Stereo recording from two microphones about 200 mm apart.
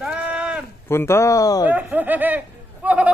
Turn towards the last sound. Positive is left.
turn(degrees=-5)  # may be behind; listen again after turning